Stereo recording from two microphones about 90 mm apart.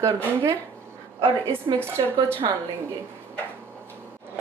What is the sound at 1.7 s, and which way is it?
Speech, 50° right (ahead or behind).